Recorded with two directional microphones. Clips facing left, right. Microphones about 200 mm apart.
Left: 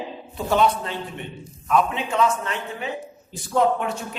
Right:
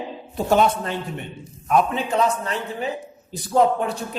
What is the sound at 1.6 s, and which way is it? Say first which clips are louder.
A man's voice: right 2 dB; 40° right (ahead or behind).